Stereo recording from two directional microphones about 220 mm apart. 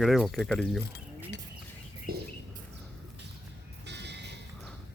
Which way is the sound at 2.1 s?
40° right (ahead or behind).